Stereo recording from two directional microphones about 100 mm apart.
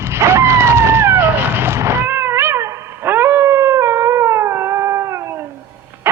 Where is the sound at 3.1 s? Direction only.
20° right (ahead or behind).